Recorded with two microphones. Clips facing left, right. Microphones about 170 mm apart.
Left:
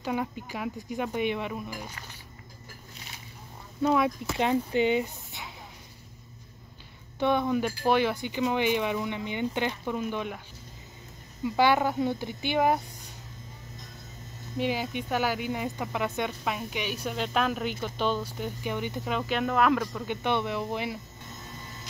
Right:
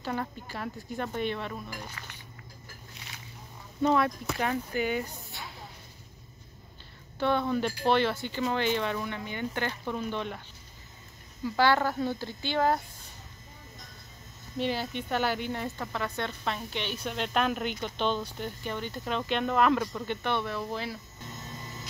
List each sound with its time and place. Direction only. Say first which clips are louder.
0.0 s speech: left 3 dB; 10° left (ahead or behind)
3.8 s speech: left 1 dB; 5° left (ahead or behind)
4.4 s speech: left 6 dB; 20° left (ahead or behind)
7.2 s speech: left 2 dB; 15° left (ahead or behind)
11.4 s speech: left 2 dB; 20° left (ahead or behind)
14.6 s speech: left 2 dB; 10° left (ahead or behind)
20.1 s speech: left 5 dB; 20° left (ahead or behind)